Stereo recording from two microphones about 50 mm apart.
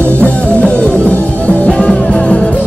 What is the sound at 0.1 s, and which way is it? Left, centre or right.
Music, left.